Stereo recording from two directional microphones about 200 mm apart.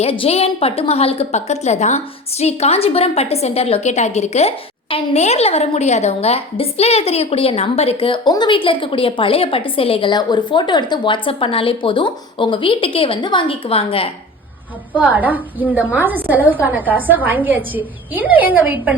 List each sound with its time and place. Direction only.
0.0 s a woman's voice: 30° left (ahead or behind)
14.9 s a woman's voice: 10° right (ahead or behind)